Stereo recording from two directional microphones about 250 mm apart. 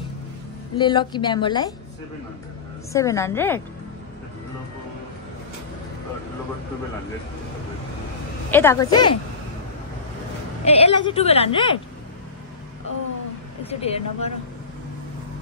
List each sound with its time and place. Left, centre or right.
0.7 s a woman's voice: centre
2.9 s a woman's voice: centre
8.5 s a woman's voice: centre
10.6 s a woman's voice: left
13.7 s a woman's voice: left